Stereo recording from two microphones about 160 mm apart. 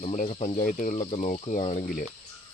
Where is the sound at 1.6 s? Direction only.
40° left (ahead or behind).